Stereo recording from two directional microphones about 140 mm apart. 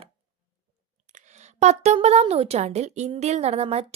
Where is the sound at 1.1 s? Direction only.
55° right (ahead or behind).